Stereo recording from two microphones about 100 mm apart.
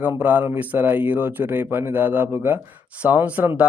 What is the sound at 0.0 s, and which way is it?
Speech, 15° right (ahead or behind).